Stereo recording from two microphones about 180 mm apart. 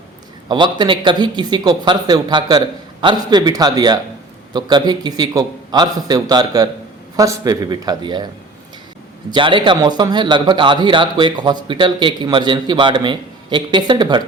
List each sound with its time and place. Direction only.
0.4 s a man's voice: 25° right (ahead or behind)
9.3 s a man's voice: 25° right (ahead or behind)